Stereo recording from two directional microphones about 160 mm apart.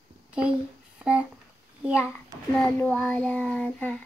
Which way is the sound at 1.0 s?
5° right (ahead or behind).